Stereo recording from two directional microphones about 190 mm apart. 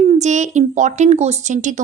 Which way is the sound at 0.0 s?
35° right (ahead or behind).